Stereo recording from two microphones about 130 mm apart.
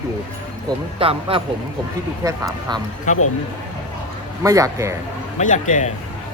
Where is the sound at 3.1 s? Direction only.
70° left (ahead or behind).